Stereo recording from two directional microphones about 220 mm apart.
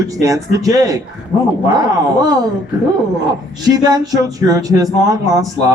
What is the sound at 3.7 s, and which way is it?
A man's voice, 20° right (ahead or behind).